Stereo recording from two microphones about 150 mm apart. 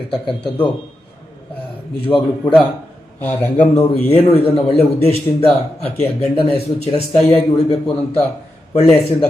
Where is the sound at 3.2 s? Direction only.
10° left (ahead or behind).